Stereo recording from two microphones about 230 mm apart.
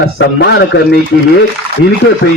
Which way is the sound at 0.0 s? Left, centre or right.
Left.